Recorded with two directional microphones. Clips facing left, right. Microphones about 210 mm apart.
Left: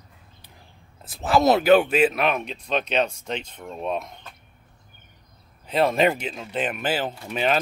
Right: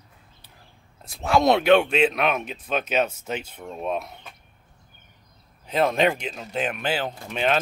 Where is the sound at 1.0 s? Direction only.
Centre (ahead or behind).